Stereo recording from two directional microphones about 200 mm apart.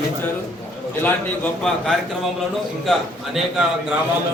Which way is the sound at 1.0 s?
5° left (ahead or behind).